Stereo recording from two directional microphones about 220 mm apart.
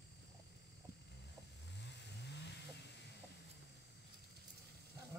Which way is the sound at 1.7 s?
50° left (ahead or behind).